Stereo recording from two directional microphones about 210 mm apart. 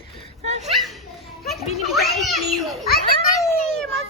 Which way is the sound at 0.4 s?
35° right (ahead or behind).